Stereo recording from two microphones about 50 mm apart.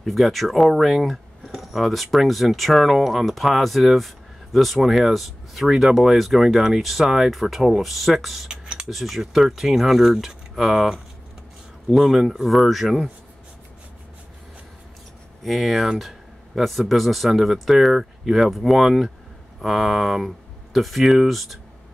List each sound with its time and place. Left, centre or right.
0.0 s speech: centre
8.5 s typing: centre
8.8 s speech: centre
15.4 s speech: centre